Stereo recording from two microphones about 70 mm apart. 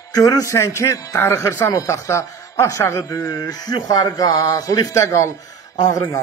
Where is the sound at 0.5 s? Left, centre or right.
Left.